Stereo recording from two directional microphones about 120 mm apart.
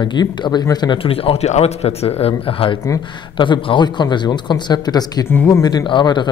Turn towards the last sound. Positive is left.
turn(degrees=40)  # may be behind; listen again after turning